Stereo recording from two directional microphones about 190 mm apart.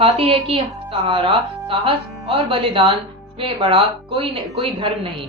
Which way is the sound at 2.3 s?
25° right (ahead or behind).